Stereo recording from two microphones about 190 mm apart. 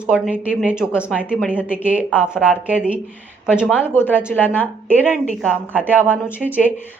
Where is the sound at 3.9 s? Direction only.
10° left (ahead or behind).